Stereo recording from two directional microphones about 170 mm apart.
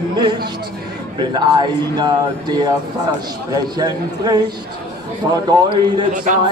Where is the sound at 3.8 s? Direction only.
25° right (ahead or behind).